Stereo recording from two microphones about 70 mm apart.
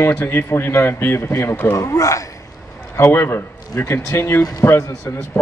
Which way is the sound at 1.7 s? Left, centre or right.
Left.